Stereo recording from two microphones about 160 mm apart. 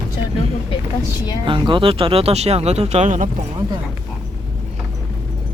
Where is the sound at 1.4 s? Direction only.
30° right (ahead or behind); by 3.3 s 50° right (ahead or behind).